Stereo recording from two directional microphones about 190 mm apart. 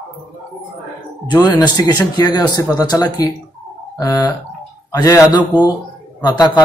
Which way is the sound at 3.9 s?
20° left (ahead or behind).